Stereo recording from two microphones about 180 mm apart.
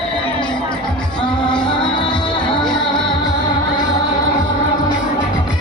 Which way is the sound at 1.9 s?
25° left (ahead or behind).